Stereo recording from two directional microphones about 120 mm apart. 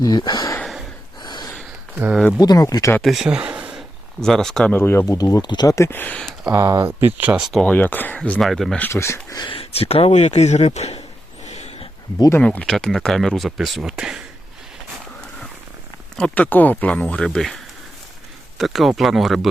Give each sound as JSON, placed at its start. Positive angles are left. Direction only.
{"t": 0.0, "sound": "speech", "side_deg": 35}
{"t": 0.6, "sound": "snort", "side_deg": 0}
{"t": 1.2, "sound": "gasp", "side_deg": 35}
{"t": 2.4, "sound": "speech", "side_deg": 30}
{"t": 3.0, "sound": "speech", "side_deg": 0}
{"t": 4.2, "sound": "speech", "side_deg": 5}
{"t": 4.7, "sound": "speech", "side_deg": 20}
{"t": 6.5, "sound": "speech", "side_deg": -25}
{"t": 7.6, "sound": "speech", "side_deg": 15}
{"t": 8.8, "sound": "speech", "side_deg": 20}
{"t": 9.6, "sound": "speech", "side_deg": 55}
{"t": 11.4, "sound": "dog", "side_deg": 65}
{"t": 12.4, "sound": "speech", "side_deg": 10}
{"t": 16.1, "sound": "speech", "side_deg": 10}